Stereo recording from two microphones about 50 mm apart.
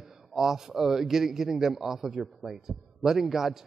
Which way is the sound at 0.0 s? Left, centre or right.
Centre.